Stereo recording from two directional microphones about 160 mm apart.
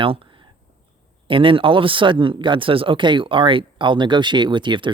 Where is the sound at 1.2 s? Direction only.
35° right (ahead or behind).